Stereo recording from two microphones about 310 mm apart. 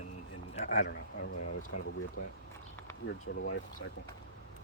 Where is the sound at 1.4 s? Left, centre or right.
Left.